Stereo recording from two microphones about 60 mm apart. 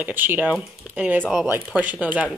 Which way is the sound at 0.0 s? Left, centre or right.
Right.